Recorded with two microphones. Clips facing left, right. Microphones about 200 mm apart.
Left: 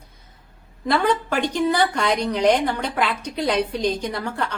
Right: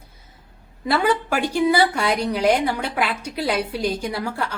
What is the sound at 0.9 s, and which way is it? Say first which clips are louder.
A woman's voice: even; 5° right (ahead or behind).